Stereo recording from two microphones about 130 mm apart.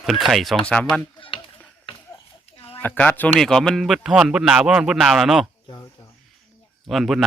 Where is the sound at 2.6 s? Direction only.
45° left (ahead or behind).